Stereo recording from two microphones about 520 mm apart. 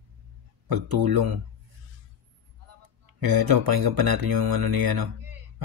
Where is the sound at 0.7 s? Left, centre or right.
Right.